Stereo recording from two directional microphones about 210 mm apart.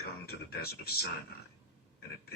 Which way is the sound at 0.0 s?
50° left (ahead or behind).